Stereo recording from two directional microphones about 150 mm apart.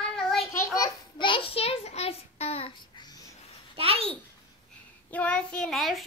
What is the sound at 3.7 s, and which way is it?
Babbling, 40° right (ahead or behind).